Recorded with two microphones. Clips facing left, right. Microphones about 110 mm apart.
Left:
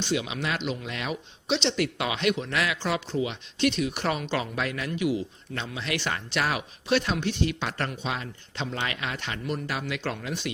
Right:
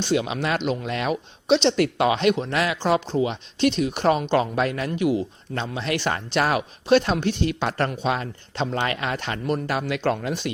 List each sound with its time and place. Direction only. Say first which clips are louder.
0.1 s speech: right 6 dB; 45° right (ahead or behind)